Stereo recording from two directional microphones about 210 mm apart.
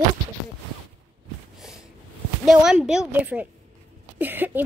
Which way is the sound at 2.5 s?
Centre (ahead or behind).